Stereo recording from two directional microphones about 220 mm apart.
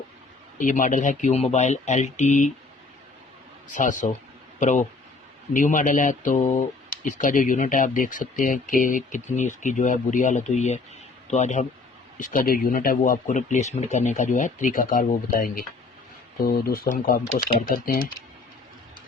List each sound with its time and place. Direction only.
0.6 s speech: 35° left (ahead or behind)
3.7 s speech: 35° left (ahead or behind)